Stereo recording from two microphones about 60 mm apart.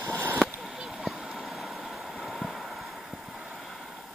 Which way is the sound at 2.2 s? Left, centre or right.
Centre.